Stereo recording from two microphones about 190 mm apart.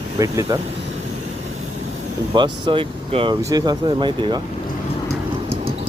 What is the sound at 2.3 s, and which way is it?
Speech, 25° right (ahead or behind).